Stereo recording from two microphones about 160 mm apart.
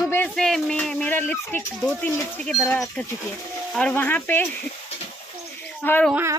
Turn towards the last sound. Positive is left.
turn(degrees=10)  # may be behind; listen again after turning